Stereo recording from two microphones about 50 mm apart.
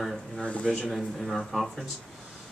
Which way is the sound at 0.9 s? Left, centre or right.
Centre.